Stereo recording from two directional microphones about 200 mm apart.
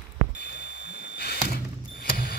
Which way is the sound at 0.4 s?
55° left (ahead or behind).